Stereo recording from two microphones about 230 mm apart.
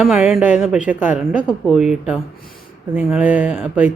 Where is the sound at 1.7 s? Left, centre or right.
Centre.